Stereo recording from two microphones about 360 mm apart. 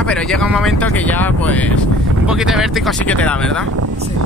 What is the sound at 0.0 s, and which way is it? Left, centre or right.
Speech, centre.